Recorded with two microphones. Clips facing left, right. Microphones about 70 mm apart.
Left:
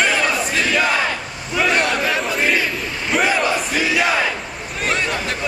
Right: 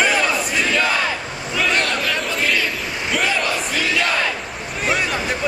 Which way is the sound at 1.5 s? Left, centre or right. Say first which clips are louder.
Left 2 dB; centre.